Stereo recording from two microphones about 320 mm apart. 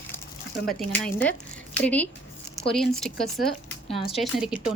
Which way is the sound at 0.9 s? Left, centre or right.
Centre.